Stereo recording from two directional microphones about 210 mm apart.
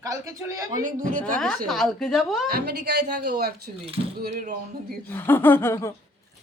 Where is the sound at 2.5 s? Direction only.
50° right (ahead or behind).